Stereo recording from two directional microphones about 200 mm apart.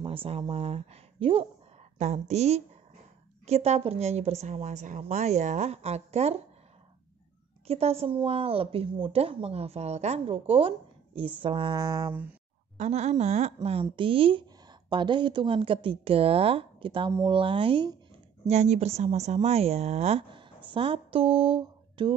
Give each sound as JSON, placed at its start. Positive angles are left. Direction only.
{"t": 0.0, "sound": "a woman's voice", "side_deg": -25}
{"t": 7.6, "sound": "a woman's voice", "side_deg": -30}
{"t": 12.7, "sound": "a woman's voice", "side_deg": -35}